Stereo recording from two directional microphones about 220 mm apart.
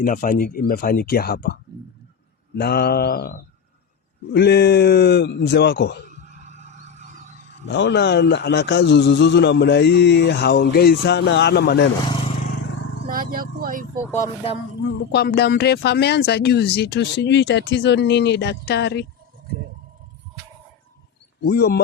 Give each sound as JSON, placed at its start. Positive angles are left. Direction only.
{"t": 0.0, "sound": "speech", "side_deg": 40}
{"t": 2.6, "sound": "speech", "side_deg": 45}
{"t": 6.1, "sound": "music", "side_deg": -30}
{"t": 7.6, "sound": "speech", "side_deg": 55}
{"t": 13.1, "sound": "speech", "side_deg": -40}
{"t": 15.1, "sound": "speech", "side_deg": 50}
{"t": 21.4, "sound": "speech", "side_deg": 45}